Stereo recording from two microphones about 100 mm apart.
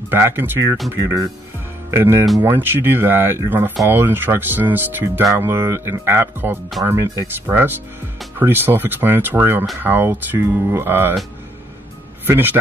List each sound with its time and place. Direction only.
0.1 s speech: 20° right (ahead or behind)
12.3 s speech: 20° right (ahead or behind)